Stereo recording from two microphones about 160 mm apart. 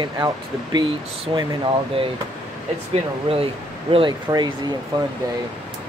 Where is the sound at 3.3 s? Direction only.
40° right (ahead or behind).